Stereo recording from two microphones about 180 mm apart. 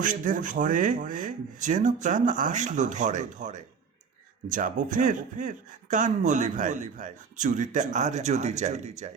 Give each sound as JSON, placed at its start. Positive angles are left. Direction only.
{"t": 0.0, "sound": "speech", "side_deg": -45}